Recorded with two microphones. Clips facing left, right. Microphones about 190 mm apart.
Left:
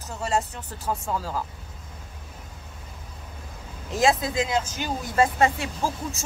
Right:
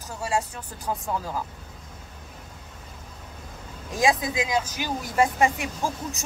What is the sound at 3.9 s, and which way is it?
Speech, 15° right (ahead or behind).